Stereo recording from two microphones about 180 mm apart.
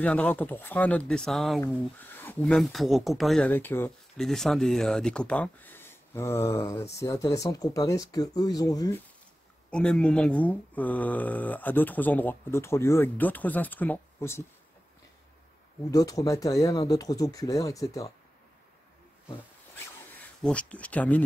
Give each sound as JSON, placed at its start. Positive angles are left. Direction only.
{"t": 0.0, "sound": "speech", "side_deg": 5}
{"t": 9.7, "sound": "speech", "side_deg": 5}
{"t": 15.9, "sound": "speech", "side_deg": 20}
{"t": 20.2, "sound": "speech", "side_deg": 5}